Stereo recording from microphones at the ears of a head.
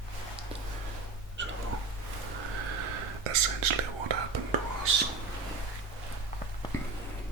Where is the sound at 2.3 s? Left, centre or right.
Right.